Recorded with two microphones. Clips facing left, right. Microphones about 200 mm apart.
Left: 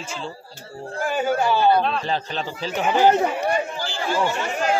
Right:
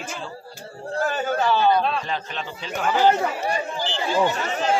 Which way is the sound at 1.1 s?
10° left (ahead or behind).